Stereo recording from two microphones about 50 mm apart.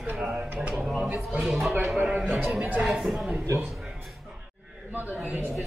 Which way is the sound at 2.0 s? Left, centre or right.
Right.